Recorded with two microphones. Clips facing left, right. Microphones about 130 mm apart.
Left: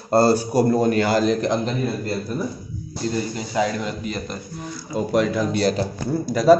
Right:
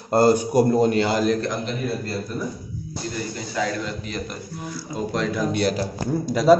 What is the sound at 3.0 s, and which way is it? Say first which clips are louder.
Speech: left 8 dB; 30° left (ahead or behind).